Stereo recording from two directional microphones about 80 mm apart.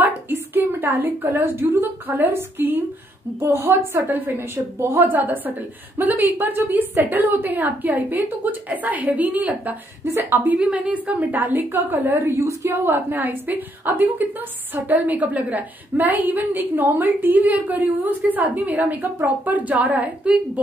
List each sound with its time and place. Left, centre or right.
0.0 s a woman's voice: right
5.1 s a woman's voice: right
12.8 s a woman's voice: right